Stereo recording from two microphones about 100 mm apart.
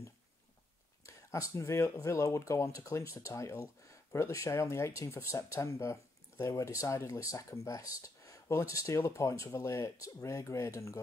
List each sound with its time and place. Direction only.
1.0 s speech: 30° left (ahead or behind)